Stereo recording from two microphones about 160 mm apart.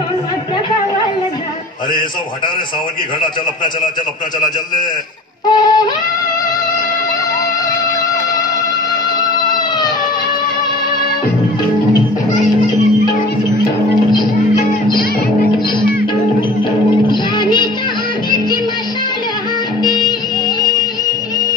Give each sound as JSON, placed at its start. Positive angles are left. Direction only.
{"t": 5.5, "sound": "music", "side_deg": 25}
{"t": 16.9, "sound": "music", "side_deg": 30}
{"t": 19.8, "sound": "music", "side_deg": 25}